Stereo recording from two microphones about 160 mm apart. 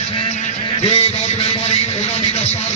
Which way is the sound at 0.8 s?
35° left (ahead or behind).